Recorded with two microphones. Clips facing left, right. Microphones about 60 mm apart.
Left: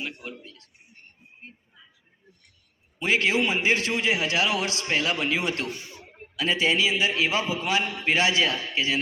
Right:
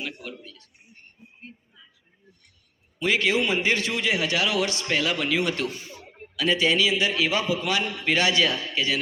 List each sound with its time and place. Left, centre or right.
0.0 s a man's voice: left
3.0 s a man's voice: left